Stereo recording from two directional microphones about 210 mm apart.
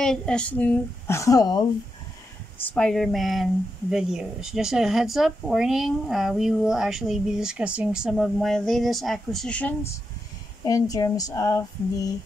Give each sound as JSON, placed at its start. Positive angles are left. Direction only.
{"t": 0.0, "sound": "speech", "side_deg": 5}
{"t": 2.7, "sound": "speech", "side_deg": 0}